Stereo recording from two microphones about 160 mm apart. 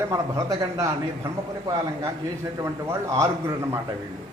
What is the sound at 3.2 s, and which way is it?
Speech, 15° right (ahead or behind).